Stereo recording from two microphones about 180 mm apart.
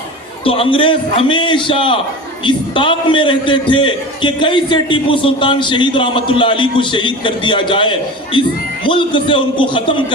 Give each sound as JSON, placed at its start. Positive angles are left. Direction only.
{"t": 0.4, "sound": "a man's voice", "side_deg": 30}